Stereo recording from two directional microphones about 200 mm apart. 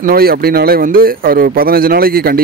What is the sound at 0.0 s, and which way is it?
Speech, 50° right (ahead or behind).